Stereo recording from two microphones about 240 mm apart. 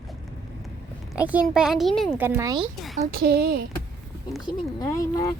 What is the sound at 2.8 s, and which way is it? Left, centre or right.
Speech, centre.